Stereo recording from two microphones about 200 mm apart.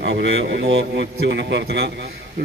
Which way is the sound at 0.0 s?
65° right (ahead or behind).